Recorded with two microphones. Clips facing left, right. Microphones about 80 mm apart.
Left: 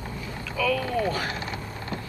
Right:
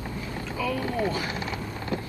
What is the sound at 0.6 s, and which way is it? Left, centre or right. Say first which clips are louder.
Boat: left 4 dB; left.